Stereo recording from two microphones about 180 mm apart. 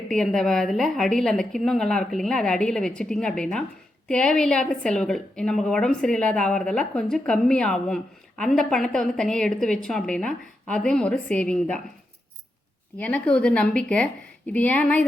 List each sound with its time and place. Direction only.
0.1 s a woman's voice: centre (ahead or behind)
13.0 s a woman's voice: 10° left (ahead or behind)